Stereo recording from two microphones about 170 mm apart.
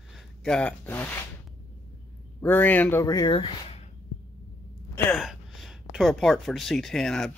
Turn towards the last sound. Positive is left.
turn(degrees=5)  # may be behind; listen again after turning